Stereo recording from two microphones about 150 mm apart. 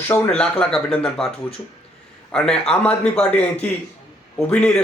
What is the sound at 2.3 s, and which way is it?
Speech, 5° left (ahead or behind).